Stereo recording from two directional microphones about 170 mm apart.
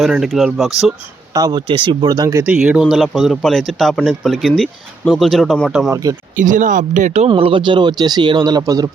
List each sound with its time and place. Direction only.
0.0 s speech: centre (ahead or behind)
1.4 s speech: 25° right (ahead or behind)
2.5 s speech: 5° right (ahead or behind)
6.3 s speech: 50° right (ahead or behind); by 8.9 s 20° right (ahead or behind)